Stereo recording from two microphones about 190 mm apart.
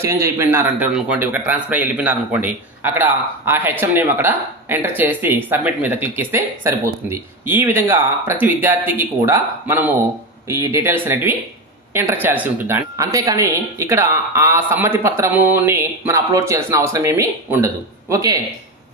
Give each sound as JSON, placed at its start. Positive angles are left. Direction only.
{"t": 0.0, "sound": "speech", "side_deg": -10}